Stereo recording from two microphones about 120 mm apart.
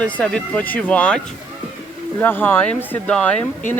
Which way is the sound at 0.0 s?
10° left (ahead or behind).